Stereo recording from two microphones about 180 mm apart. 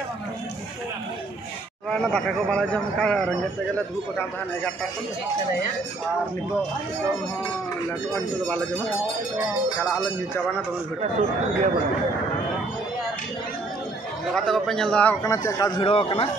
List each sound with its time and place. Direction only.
1.9 s speech: 5° left (ahead or behind)
11.0 s a man's voice: 40° right (ahead or behind)
14.3 s speech: centre (ahead or behind)
15.2 s a man's voice: 15° left (ahead or behind)
15.8 s a man's voice: 30° left (ahead or behind)